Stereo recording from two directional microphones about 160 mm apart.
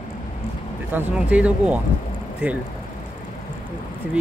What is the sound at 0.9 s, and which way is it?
Speech, 10° right (ahead or behind).